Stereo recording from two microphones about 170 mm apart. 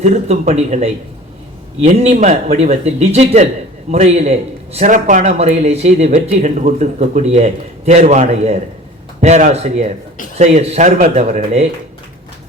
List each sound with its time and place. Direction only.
0.0 s a man's voice: 40° right (ahead or behind)